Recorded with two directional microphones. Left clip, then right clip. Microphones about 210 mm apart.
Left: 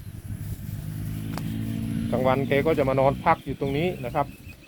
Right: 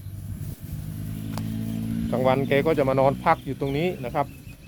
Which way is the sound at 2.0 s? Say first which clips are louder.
Right 1 dB; 10° right (ahead or behind).